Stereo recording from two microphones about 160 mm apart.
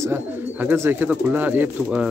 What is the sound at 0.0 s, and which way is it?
A man's voice, 15° right (ahead or behind).